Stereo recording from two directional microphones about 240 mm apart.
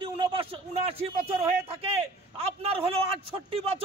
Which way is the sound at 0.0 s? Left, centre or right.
Right.